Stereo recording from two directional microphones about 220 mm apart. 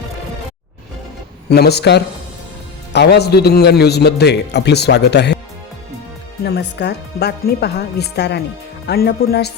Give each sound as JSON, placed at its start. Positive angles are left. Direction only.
{"t": 1.5, "sound": "a man's voice", "side_deg": 50}
{"t": 6.4, "sound": "a man's voice", "side_deg": 50}